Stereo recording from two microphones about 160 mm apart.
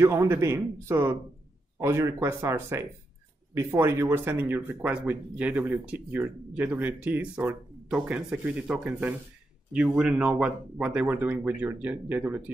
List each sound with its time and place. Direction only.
0.0 s speech: 15° right (ahead or behind)